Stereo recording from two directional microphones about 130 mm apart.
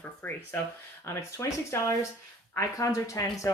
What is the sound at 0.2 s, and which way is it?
Speech, 15° left (ahead or behind).